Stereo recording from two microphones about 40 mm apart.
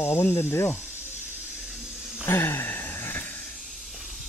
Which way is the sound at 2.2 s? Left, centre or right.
Left.